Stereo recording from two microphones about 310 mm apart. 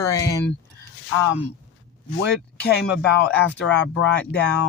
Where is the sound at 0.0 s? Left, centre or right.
Centre.